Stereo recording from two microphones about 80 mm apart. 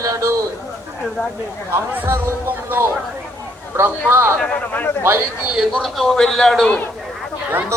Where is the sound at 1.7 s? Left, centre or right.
Right.